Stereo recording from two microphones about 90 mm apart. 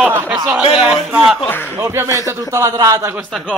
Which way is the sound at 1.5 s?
25° left (ahead or behind).